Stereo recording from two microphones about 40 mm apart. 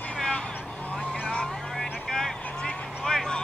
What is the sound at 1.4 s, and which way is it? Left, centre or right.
Vehicle, centre.